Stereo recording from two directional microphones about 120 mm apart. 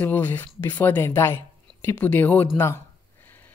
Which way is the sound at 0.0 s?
15° left (ahead or behind).